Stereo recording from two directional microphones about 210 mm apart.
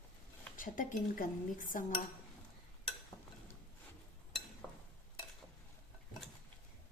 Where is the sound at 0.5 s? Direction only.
40° left (ahead or behind).